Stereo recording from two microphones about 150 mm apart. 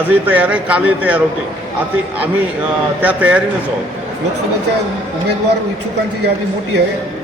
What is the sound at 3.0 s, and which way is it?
Speech, 10° right (ahead or behind).